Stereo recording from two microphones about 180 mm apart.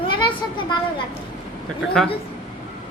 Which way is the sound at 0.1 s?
25° left (ahead or behind).